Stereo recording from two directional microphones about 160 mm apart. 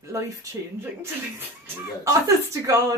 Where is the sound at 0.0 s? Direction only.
20° right (ahead or behind).